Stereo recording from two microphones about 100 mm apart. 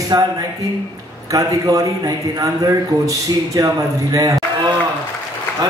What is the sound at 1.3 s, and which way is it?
A man's voice, 35° right (ahead or behind).